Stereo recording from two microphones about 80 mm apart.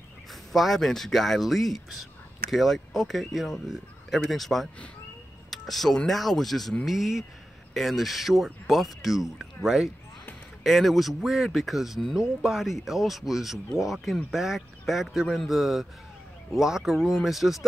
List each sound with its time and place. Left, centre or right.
0.3 s speech: centre